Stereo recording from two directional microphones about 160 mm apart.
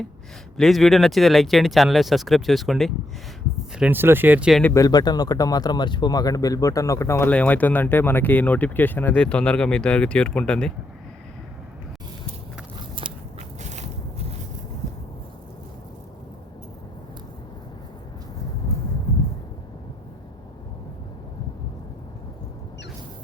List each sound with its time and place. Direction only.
0.5 s speech: centre (ahead or behind)
3.8 s speech: 10° right (ahead or behind)
4.6 s speech: 20° left (ahead or behind)
13.6 s biting: 45° right (ahead or behind)